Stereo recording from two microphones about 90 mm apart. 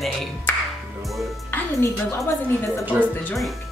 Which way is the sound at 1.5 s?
30° left (ahead or behind).